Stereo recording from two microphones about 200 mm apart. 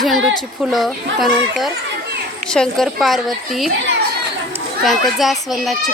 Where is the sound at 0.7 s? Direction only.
Centre (ahead or behind).